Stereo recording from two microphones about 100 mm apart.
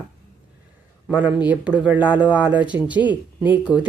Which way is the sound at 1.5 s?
10° right (ahead or behind).